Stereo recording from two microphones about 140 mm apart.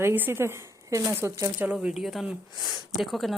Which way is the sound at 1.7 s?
10° right (ahead or behind).